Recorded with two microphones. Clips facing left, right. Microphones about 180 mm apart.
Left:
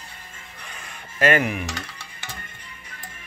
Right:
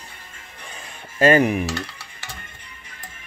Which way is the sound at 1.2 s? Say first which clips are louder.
Right 5 dB; 35° right (ahead or behind).